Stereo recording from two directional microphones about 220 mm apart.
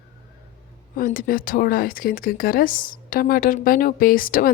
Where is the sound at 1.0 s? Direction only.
40° left (ahead or behind).